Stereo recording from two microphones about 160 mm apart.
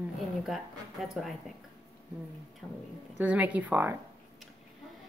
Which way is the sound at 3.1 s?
10° right (ahead or behind).